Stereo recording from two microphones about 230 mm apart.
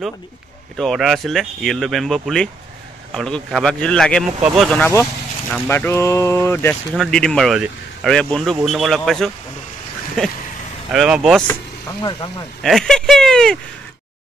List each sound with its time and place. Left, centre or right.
0.7 s speech: centre
10.9 s speech: centre
12.0 s speech: centre
12.6 s speech: centre